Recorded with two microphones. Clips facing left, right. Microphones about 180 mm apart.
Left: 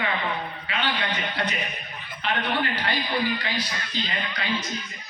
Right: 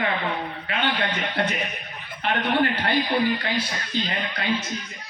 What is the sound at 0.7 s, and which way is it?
Speech, 55° right (ahead or behind).